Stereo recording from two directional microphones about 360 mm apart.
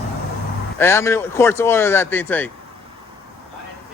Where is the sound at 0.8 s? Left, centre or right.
Centre.